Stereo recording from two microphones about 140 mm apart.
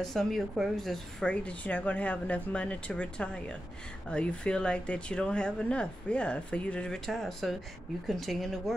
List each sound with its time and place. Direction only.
0.0 s speech: centre (ahead or behind)